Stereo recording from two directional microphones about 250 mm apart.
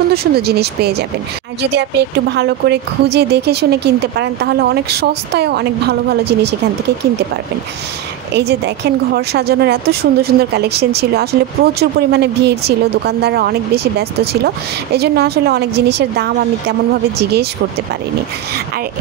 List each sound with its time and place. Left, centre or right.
0.1 s a woman's voice: right
8.4 s a woman's voice: right